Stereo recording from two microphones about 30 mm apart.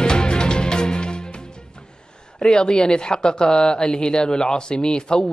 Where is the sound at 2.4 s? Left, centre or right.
Left.